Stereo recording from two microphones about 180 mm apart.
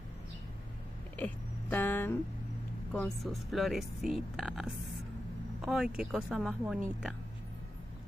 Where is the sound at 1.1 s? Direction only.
10° left (ahead or behind).